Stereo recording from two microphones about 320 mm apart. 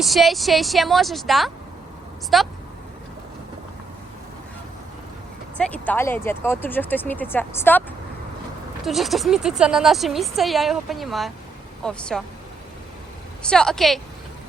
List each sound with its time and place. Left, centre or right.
0.0 s speech: centre
5.5 s speech: centre
13.4 s speech: centre